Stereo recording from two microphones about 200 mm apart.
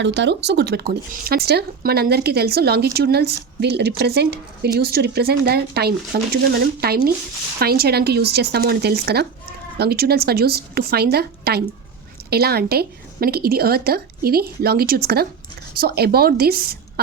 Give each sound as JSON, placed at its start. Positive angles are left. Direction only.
{"t": 0.0, "sound": "speech", "side_deg": -60}